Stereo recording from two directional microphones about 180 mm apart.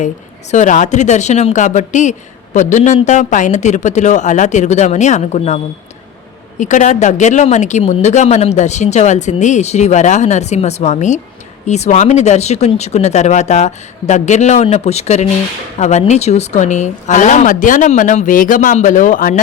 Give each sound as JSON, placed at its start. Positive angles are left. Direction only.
{"t": 0.5, "sound": "speech", "side_deg": 45}
{"t": 6.6, "sound": "a woman's voice", "side_deg": 40}